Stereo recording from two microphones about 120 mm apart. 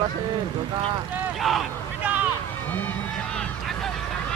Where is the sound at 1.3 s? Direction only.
Centre (ahead or behind).